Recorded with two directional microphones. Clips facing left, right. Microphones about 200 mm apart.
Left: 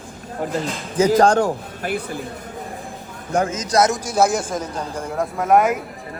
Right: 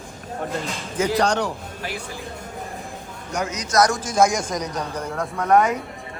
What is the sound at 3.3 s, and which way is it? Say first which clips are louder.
Speech: left 6 dB; 55° left (ahead or behind).